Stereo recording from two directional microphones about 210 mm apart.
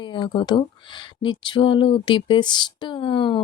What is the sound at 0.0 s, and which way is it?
Speech, 25° left (ahead or behind).